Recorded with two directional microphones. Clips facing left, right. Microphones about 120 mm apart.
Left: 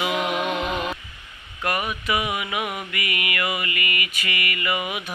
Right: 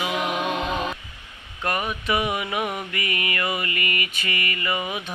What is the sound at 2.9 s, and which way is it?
Mantra, 35° right (ahead or behind).